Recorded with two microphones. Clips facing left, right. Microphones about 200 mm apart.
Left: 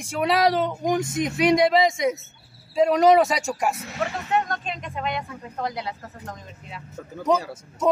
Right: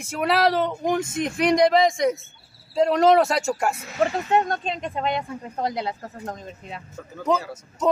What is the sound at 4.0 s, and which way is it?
Speech, 30° right (ahead or behind).